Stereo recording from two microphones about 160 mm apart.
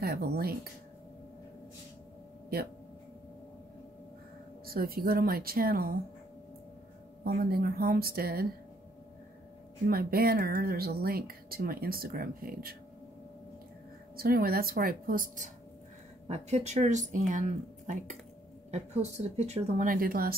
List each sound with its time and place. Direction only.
0.0 s speech: 75° right (ahead or behind)
4.6 s speech: 70° right (ahead or behind)
7.2 s speech: 70° right (ahead or behind)
9.8 s speech: 70° right (ahead or behind)
14.1 s speech: 70° right (ahead or behind)
16.3 s speech: 45° right (ahead or behind)
19.9 s a woman's voice: 65° right (ahead or behind)